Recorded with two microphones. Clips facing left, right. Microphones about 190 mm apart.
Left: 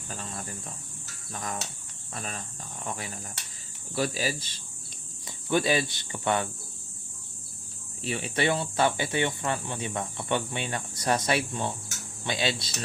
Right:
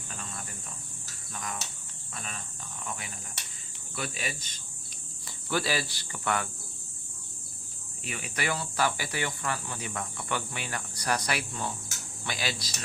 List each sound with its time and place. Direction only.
0.1 s insect: 35° left (ahead or behind)
1.3 s speech: 35° left (ahead or behind)
5.5 s speech: 20° left (ahead or behind)
8.0 s speech: 30° left (ahead or behind)